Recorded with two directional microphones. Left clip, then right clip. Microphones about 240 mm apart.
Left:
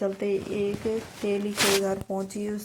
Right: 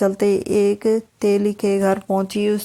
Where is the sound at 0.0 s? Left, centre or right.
Right.